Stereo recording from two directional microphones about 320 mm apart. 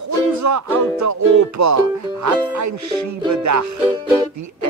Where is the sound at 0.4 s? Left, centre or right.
Right.